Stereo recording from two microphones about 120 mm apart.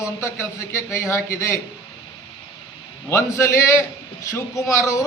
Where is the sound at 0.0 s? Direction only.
25° left (ahead or behind).